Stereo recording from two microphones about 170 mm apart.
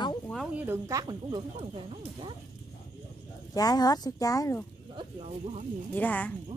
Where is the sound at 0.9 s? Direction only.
20° right (ahead or behind).